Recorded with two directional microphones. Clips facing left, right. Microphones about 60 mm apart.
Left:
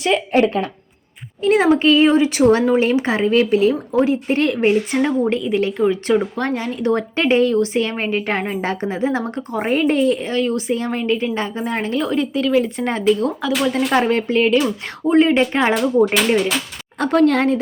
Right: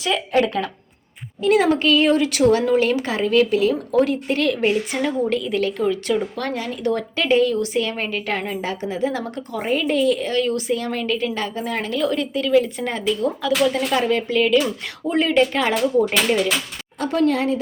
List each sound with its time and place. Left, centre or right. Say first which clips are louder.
0.0 s speech: left 3 dB; left
2.4 s speech: left 2 dB; left
13.9 s speech: left 3 dB; left
17.0 s speech: left 4 dB; left